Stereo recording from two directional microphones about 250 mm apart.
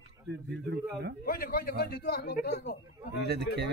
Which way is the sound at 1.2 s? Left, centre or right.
Left.